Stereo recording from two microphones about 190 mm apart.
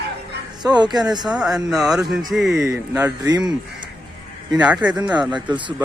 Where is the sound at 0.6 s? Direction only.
20° right (ahead or behind).